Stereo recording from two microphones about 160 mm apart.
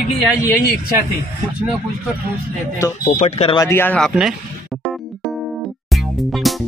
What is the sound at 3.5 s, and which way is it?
Speech, 15° left (ahead or behind).